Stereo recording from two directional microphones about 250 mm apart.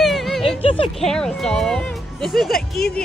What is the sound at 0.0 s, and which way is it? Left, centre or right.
Music, centre.